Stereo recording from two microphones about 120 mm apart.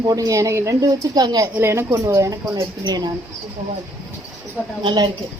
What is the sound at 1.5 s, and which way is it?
A woman's voice, 20° right (ahead or behind).